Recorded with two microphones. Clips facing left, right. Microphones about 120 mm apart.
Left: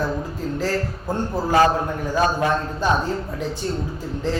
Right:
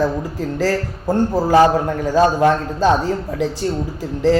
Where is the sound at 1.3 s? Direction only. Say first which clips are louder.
Right 4 dB; 25° right (ahead or behind).